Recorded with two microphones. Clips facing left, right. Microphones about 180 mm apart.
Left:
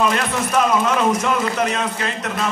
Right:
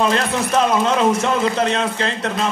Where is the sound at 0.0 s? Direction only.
30° right (ahead or behind).